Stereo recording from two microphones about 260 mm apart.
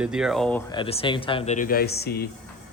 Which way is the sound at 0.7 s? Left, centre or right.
Left.